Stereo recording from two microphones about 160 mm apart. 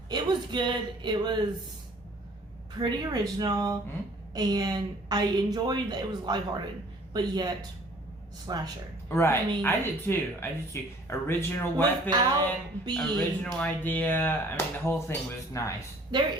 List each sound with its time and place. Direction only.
0.1 s a woman's voice: 25° right (ahead or behind)
2.7 s a woman's voice: 25° right (ahead or behind)
9.0 s speech: 15° left (ahead or behind)
12.1 s a woman's voice: 25° right (ahead or behind)
13.0 s speech: 5° left (ahead or behind); by 15.7 s 20° left (ahead or behind)